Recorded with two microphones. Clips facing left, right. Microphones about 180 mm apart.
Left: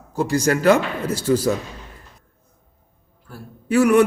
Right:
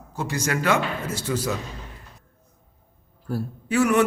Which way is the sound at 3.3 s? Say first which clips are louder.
Right 11 dB; 40° right (ahead or behind).